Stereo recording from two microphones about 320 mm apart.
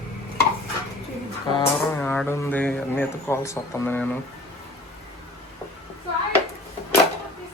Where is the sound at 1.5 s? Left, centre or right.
Centre.